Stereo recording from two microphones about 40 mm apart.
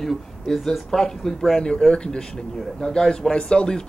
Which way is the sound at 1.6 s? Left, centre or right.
Centre.